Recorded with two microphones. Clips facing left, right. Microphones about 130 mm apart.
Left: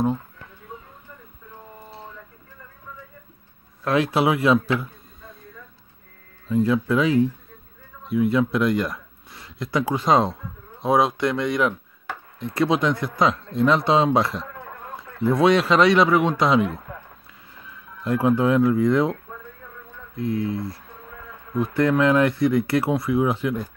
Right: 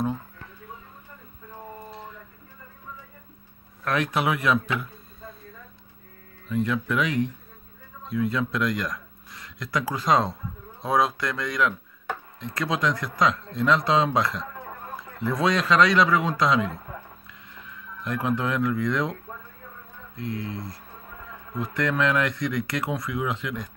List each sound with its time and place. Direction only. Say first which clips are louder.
3.8 s speech: left 5 dB; 30° left (ahead or behind)
6.5 s speech: left 5 dB; 30° left (ahead or behind)
17.6 s speech: left 7 dB; 30° left (ahead or behind)
20.2 s speech: left 7 dB; 25° left (ahead or behind)
21.7 s speech: left 6 dB; 30° left (ahead or behind)